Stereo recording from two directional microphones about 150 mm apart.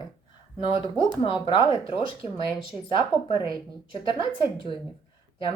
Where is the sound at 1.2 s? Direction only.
35° left (ahead or behind).